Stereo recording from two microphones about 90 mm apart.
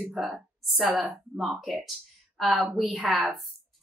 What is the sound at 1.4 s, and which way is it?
A woman's voice, centre (ahead or behind).